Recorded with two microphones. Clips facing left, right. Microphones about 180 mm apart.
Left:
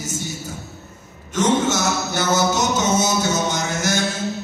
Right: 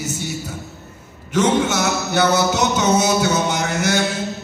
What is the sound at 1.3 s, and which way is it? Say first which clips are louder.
Mantra: right 2 dB; 65° right (ahead or behind).